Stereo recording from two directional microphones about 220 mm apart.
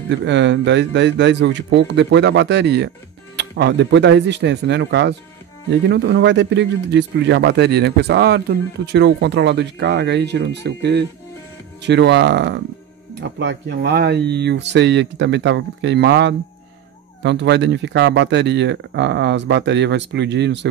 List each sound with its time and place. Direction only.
0.1 s speech: 55° right (ahead or behind)